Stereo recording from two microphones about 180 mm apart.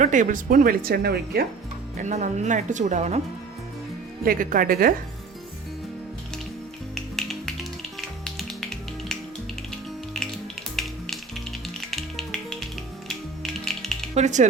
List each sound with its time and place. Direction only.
0.0 s speech: 45° right (ahead or behind); by 1.5 s 60° right (ahead or behind)
2.0 s speech: 40° right (ahead or behind)
4.2 s speech: 50° right (ahead or behind)
6.9 s music: centre (ahead or behind)
8.2 s finger snapping: centre (ahead or behind)
10.2 s music: centre (ahead or behind)
14.2 s speech: 40° right (ahead or behind)